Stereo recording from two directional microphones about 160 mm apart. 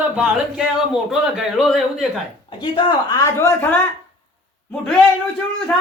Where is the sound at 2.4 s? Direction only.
30° left (ahead or behind).